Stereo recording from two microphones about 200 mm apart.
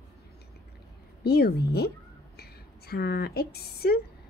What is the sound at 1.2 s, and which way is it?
A woman's voice, 55° left (ahead or behind).